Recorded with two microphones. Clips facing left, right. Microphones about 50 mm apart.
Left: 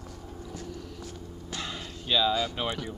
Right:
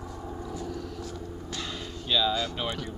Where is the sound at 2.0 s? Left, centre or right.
Centre.